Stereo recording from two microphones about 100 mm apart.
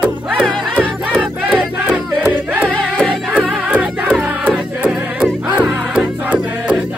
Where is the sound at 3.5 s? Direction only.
10° right (ahead or behind).